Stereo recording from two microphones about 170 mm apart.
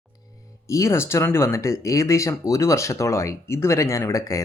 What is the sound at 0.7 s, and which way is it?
Speech, 15° left (ahead or behind).